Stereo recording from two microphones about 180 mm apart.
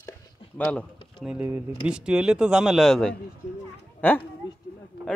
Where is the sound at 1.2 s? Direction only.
5° right (ahead or behind); by 4.2 s 10° left (ahead or behind).